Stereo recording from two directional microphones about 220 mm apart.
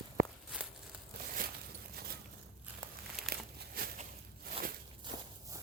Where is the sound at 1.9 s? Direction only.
45° right (ahead or behind).